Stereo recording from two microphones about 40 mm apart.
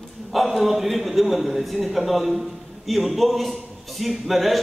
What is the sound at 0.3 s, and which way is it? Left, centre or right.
A man's voice, centre.